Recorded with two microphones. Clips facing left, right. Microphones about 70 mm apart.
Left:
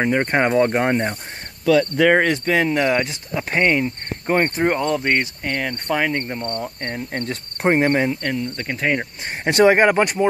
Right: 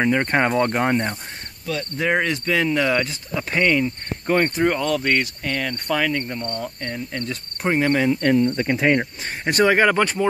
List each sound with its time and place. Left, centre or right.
0.0 s speech: centre
1.7 s speech: left
2.0 s speech: left
2.3 s speech: left
6.8 s cricket: left
8.2 s cricket: centre
9.4 s speech: left